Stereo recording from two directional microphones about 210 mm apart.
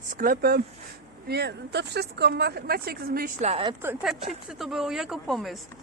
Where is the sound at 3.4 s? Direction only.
30° right (ahead or behind).